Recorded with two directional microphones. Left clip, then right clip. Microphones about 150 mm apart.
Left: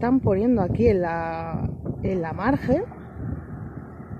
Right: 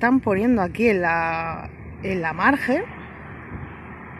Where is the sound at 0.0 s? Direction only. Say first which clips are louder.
Right 2 dB; 15° right (ahead or behind).